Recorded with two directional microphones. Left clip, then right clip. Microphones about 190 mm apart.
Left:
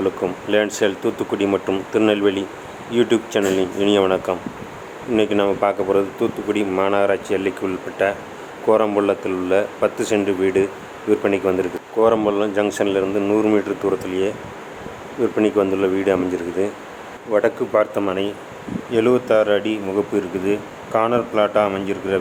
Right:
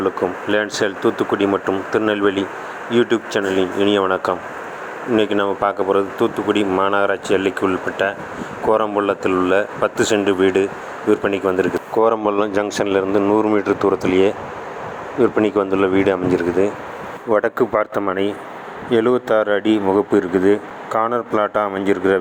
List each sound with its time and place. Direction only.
0.0 s speech: 10° right (ahead or behind)